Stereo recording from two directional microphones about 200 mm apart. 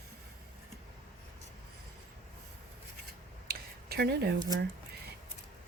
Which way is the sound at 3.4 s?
50° right (ahead or behind).